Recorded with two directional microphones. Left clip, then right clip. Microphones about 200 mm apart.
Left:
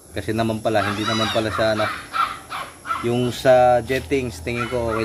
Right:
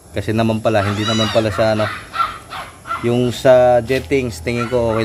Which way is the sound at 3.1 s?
35° right (ahead or behind).